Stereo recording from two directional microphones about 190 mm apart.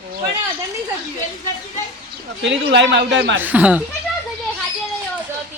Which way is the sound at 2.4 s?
70° right (ahead or behind).